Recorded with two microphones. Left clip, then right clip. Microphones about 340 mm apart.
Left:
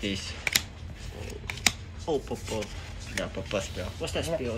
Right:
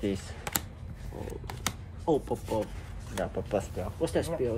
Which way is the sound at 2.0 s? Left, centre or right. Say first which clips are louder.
Right 2 dB; right.